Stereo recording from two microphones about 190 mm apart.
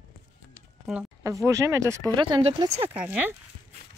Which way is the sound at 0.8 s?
5° right (ahead or behind).